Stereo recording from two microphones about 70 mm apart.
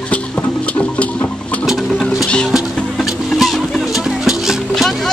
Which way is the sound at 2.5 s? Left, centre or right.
Centre.